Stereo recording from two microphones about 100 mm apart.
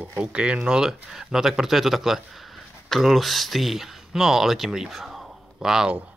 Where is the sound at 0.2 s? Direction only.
10° right (ahead or behind).